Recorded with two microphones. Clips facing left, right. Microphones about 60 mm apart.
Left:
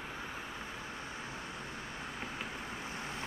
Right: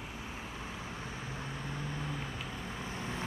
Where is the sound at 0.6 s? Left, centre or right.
Right.